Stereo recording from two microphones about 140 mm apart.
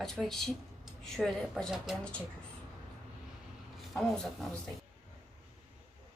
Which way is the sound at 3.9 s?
Centre (ahead or behind).